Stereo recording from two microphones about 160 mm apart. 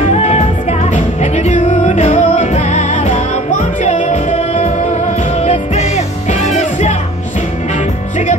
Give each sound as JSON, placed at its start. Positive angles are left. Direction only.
{"t": 0.0, "sound": "music", "side_deg": 45}